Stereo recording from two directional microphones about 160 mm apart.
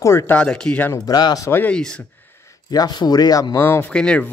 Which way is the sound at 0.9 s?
25° left (ahead or behind).